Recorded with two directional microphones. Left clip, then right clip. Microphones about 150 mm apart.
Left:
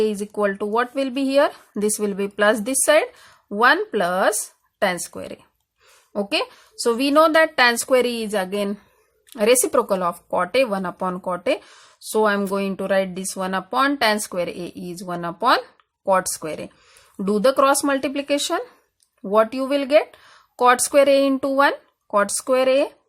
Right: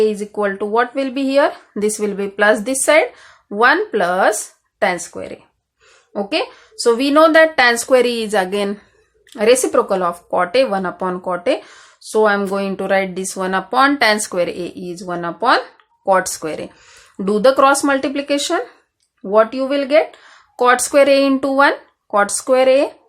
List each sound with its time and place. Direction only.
0.0 s speech: 30° left (ahead or behind)